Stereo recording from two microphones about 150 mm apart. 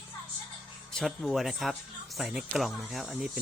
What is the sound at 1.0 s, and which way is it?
Speech, centre (ahead or behind).